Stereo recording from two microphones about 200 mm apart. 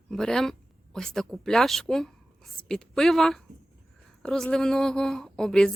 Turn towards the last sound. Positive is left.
turn(degrees=5)  # may be behind; listen again after turning